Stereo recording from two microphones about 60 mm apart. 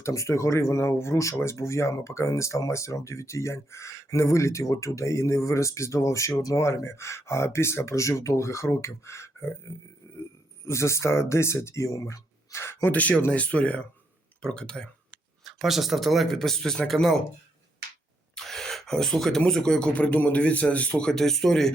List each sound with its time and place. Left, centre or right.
0.0 s speech: left
12.9 s a man's voice: left
15.4 s speech: centre
18.3 s gasp: centre
19.5 s speech: centre
19.9 s a man's voice: left
21.1 s speech: centre